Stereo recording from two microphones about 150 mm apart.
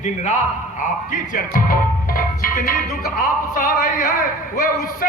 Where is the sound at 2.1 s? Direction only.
70° left (ahead or behind).